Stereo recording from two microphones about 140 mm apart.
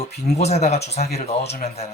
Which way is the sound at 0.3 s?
50° left (ahead or behind).